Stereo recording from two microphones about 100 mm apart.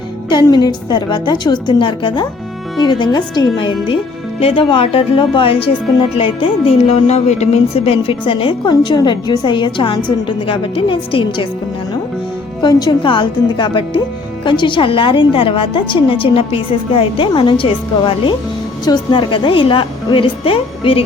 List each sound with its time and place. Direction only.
0.5 s a woman's voice: 45° left (ahead or behind)
4.4 s a woman's voice: 70° left (ahead or behind)
8.6 s a woman's voice: 45° left (ahead or behind)
12.6 s a woman's voice: 50° left (ahead or behind); by 21.0 s 65° left (ahead or behind)